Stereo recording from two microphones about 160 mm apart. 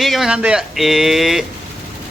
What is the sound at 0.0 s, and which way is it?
A man's voice, centre (ahead or behind).